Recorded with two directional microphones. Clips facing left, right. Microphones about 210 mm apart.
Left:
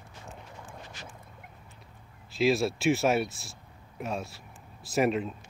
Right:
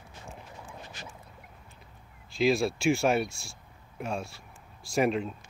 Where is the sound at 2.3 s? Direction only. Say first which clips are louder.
Even; centre (ahead or behind).